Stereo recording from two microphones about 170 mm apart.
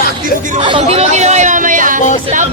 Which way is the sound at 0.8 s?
40° right (ahead or behind).